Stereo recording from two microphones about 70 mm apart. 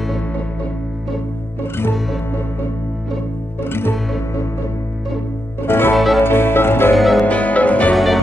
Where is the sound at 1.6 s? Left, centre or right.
Left.